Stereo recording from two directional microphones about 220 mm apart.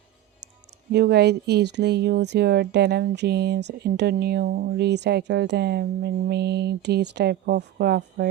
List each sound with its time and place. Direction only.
0.9 s speech: 50° right (ahead or behind)